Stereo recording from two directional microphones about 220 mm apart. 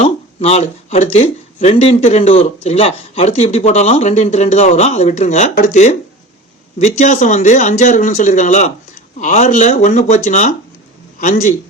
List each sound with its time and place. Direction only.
0.0 s a man's voice: 30° left (ahead or behind)